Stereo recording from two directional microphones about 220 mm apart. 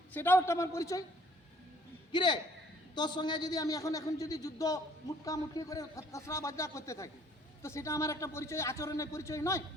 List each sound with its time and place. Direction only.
0.1 s a man's voice: 10° left (ahead or behind)
2.1 s a man's voice: 20° left (ahead or behind)